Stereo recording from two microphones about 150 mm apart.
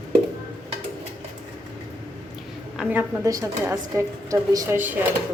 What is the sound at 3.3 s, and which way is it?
A woman's voice, 20° right (ahead or behind).